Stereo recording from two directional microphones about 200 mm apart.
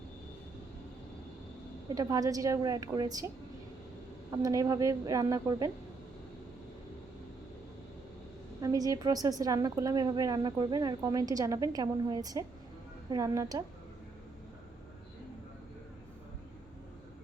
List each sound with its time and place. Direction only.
2.0 s a woman's voice: 15° right (ahead or behind)
4.3 s a woman's voice: 15° right (ahead or behind)
8.6 s a woman's voice: 15° right (ahead or behind)